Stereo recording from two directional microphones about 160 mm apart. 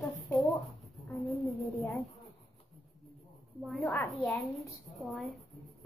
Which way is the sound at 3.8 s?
10° left (ahead or behind).